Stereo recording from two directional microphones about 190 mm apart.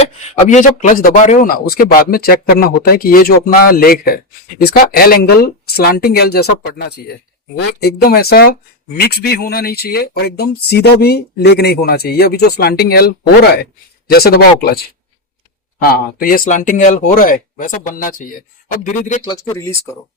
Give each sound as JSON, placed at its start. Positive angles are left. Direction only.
{"t": 0.0, "sound": "speech", "side_deg": 35}
{"t": 15.8, "sound": "speech", "side_deg": 50}
{"t": 19.3, "sound": "speech", "side_deg": 20}